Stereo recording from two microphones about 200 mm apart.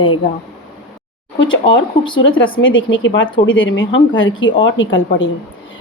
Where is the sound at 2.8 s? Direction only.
65° left (ahead or behind).